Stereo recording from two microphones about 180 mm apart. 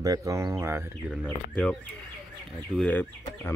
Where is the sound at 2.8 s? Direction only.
10° left (ahead or behind).